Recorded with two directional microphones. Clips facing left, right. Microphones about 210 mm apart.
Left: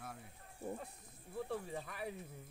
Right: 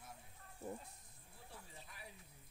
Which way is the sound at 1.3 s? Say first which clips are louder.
Left 17 dB; 65° left (ahead or behind).